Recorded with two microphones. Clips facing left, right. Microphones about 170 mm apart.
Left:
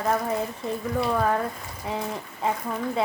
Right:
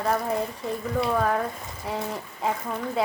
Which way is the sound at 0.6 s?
Centre (ahead or behind).